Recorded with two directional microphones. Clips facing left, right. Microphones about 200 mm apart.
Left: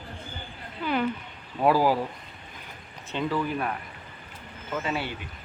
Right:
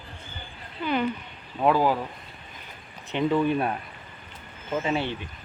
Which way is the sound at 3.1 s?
20° right (ahead or behind).